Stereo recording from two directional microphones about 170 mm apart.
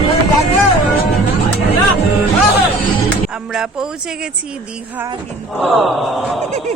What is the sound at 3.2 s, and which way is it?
Speech, 5° right (ahead or behind).